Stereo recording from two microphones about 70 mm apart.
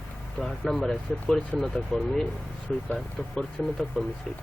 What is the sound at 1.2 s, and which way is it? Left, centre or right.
Speech, centre.